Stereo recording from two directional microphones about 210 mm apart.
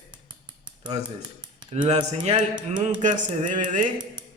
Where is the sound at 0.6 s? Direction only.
20° right (ahead or behind).